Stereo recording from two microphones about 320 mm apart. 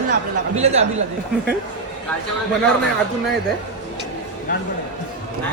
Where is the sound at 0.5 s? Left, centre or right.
Centre.